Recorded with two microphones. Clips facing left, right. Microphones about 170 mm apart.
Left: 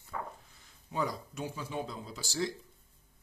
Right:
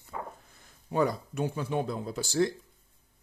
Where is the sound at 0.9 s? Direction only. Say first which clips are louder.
Right 7 dB; 60° right (ahead or behind).